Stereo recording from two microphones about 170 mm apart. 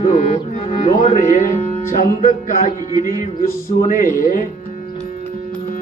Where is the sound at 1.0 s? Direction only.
35° left (ahead or behind).